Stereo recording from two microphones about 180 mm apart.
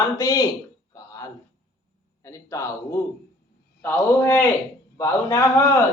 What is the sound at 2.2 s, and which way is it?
A man's voice, 15° left (ahead or behind).